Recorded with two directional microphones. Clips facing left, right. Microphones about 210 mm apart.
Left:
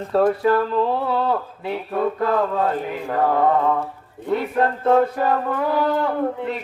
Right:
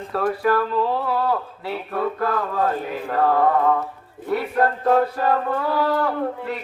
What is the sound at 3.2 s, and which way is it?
Mantra, 20° left (ahead or behind).